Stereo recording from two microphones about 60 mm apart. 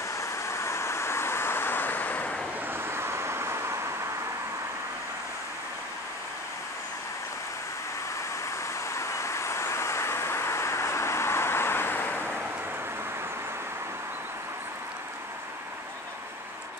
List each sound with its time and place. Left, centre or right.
0.1 s vehicle: left
2.7 s vehicle: right
8.8 s vehicle: left